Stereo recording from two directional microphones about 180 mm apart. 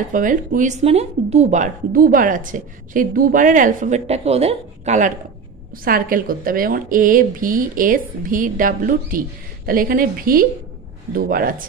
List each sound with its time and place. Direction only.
0.1 s speech: 45° right (ahead or behind)
5.9 s speech: 50° right (ahead or behind)